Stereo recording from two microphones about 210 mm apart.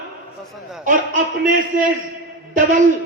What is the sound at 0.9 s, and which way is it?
A man's voice, 40° right (ahead or behind).